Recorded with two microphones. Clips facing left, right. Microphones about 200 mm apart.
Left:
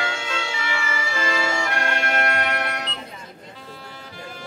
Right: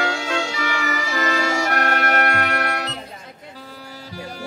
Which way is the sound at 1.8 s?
60° right (ahead or behind).